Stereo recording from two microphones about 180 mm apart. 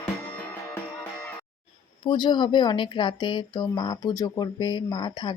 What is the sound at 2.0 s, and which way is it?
Speech, 25° left (ahead or behind).